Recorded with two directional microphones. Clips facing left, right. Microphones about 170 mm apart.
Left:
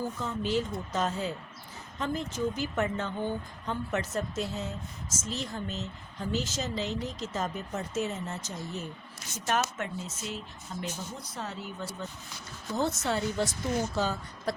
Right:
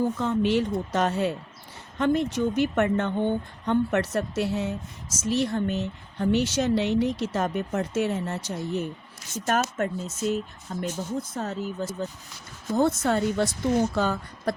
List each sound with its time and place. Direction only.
0.0 s speech: 70° right (ahead or behind)
9.5 s speech: 45° right (ahead or behind)
13.0 s speech: 50° right (ahead or behind)